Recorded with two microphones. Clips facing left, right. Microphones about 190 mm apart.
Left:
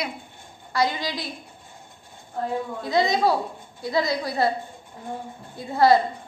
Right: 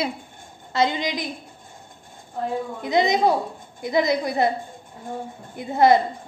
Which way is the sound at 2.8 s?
20° right (ahead or behind).